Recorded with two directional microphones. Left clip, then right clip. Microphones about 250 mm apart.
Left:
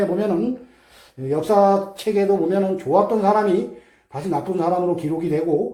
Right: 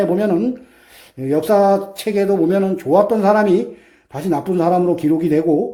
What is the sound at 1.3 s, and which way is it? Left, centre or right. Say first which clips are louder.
Speech: right 3 dB; right.